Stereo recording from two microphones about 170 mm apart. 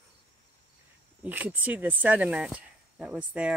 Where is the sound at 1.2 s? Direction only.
10° right (ahead or behind).